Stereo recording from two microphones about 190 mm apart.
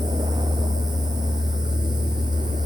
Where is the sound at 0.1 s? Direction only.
20° right (ahead or behind).